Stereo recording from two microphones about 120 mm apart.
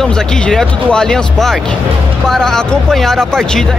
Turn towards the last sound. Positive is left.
turn(degrees=5)  # may be behind; listen again after turning